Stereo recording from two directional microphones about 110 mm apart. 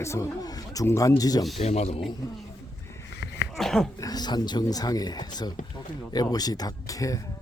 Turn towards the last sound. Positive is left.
turn(degrees=30)  # may be behind; listen again after turning